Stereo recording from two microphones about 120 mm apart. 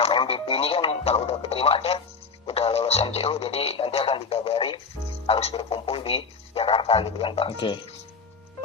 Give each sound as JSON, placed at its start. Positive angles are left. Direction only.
{"t": 0.0, "sound": "speech", "side_deg": 50}